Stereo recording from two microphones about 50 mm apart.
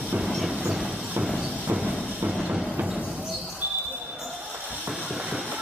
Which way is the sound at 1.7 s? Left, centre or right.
Right.